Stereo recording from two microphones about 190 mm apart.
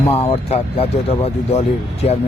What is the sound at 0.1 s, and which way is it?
Speech, 30° left (ahead or behind).